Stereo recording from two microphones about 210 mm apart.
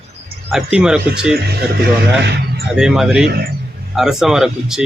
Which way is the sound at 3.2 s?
45° right (ahead or behind).